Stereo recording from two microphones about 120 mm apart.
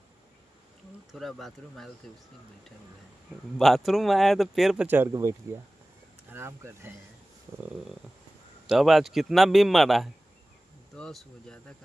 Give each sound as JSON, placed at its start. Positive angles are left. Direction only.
{"t": 1.1, "sound": "a man's voice", "side_deg": 0}
{"t": 3.5, "sound": "a man's voice", "side_deg": 0}
{"t": 4.8, "sound": "speech", "side_deg": -15}
{"t": 6.3, "sound": "speech", "side_deg": -20}
{"t": 8.6, "sound": "a man's voice", "side_deg": 0}